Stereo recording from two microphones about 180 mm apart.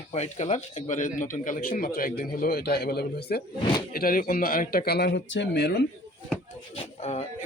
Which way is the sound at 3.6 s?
25° left (ahead or behind).